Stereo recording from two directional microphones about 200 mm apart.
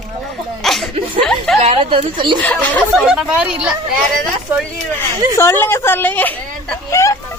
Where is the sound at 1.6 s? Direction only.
30° right (ahead or behind).